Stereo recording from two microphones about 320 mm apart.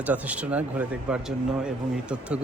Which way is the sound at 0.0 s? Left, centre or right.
Centre.